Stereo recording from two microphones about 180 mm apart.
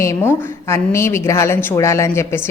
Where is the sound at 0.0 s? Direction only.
15° left (ahead or behind).